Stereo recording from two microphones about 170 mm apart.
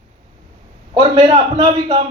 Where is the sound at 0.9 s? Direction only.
35° right (ahead or behind).